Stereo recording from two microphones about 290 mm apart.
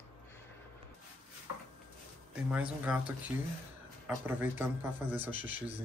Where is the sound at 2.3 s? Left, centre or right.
Centre.